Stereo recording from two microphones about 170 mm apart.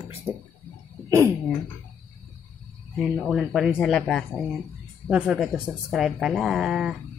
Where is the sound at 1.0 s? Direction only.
20° right (ahead or behind).